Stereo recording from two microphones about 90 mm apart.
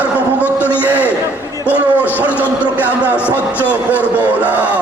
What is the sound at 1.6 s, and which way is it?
Music, 20° left (ahead or behind).